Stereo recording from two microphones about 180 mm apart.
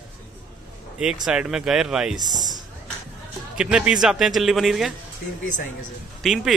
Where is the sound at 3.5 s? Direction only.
5° right (ahead or behind).